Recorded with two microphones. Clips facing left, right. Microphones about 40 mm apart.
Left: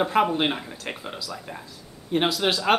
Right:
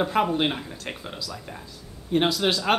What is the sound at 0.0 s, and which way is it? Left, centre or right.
Speech, centre.